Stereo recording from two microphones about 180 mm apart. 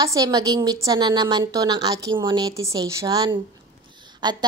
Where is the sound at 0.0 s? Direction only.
20° right (ahead or behind).